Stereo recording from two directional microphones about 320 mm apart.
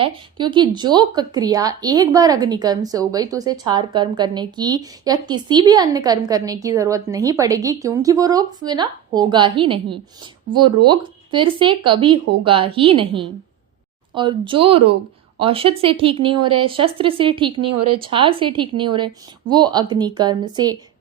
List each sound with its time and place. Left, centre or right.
0.0 s a woman's voice: centre
17.7 s speech: right
18.0 s a woman's voice: centre